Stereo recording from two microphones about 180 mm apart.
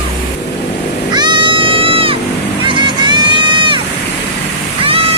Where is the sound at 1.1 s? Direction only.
25° right (ahead or behind).